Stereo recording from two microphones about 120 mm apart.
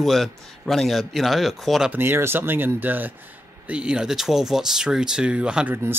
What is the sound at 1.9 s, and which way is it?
Speech, 20° right (ahead or behind).